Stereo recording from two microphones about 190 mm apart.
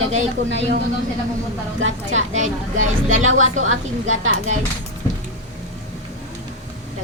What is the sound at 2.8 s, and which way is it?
A woman's voice, 90° right.